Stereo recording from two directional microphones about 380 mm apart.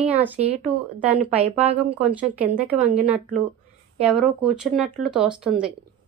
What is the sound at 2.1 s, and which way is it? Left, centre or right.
Speech, centre.